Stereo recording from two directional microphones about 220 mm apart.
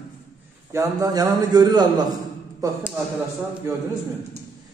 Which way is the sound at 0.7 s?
15° right (ahead or behind).